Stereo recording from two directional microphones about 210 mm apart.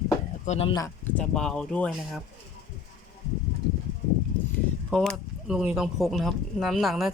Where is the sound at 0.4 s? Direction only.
35° left (ahead or behind).